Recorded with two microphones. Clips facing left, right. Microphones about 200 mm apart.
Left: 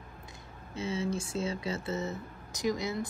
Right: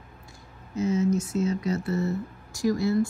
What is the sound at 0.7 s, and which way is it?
Speech, 30° left (ahead or behind).